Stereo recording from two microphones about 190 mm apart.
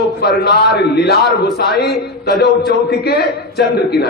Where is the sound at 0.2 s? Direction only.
60° left (ahead or behind).